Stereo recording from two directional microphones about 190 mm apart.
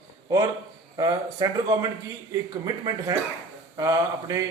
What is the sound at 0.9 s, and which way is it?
A man's voice, 20° right (ahead or behind).